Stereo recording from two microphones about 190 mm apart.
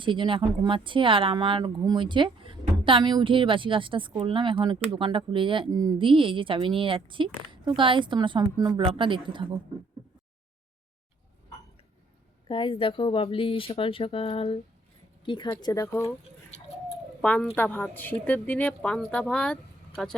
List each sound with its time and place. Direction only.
0.0 s speech: 25° right (ahead or behind)
12.5 s speech: 25° left (ahead or behind)
17.2 s a woman's voice: 5° left (ahead or behind)